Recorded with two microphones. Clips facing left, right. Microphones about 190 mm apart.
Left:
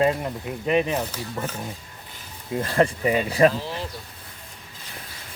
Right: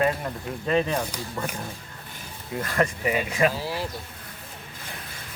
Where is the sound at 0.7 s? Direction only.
15° left (ahead or behind).